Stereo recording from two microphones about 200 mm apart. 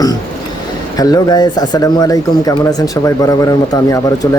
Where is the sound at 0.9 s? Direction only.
20° left (ahead or behind).